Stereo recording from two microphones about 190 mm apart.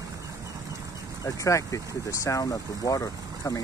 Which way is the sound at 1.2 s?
15° left (ahead or behind).